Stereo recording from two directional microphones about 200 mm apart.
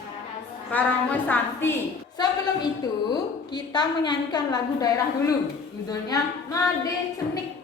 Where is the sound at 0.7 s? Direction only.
10° left (ahead or behind).